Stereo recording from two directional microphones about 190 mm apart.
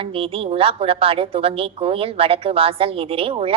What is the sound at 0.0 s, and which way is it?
A woman's voice, 30° right (ahead or behind).